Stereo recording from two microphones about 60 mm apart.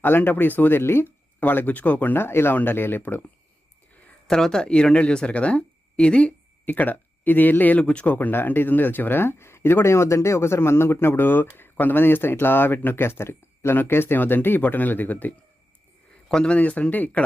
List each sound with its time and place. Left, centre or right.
0.0 s speech: left
4.3 s speech: centre; by 15.4 s left
16.3 s speech: centre
16.6 s speech: left